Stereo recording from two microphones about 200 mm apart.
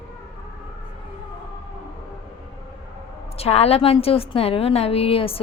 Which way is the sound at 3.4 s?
30° left (ahead or behind).